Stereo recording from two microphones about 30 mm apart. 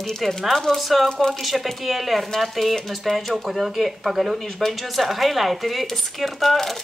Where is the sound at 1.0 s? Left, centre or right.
Left.